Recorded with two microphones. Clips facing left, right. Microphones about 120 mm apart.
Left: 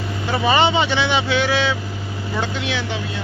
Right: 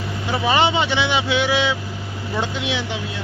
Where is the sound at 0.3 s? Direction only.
5° right (ahead or behind).